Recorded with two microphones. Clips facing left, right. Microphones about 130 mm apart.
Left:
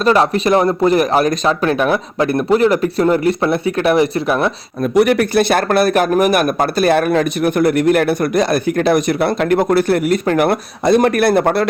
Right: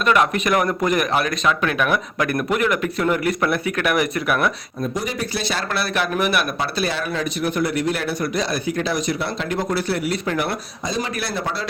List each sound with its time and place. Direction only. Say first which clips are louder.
0.0 s speech: left 5 dB; 30° left (ahead or behind)
4.8 s a man's voice: left 13 dB; 70° left (ahead or behind)